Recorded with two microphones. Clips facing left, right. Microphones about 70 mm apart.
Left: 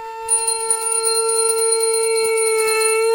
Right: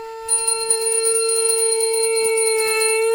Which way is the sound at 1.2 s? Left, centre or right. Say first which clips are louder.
Left 1 dB; left.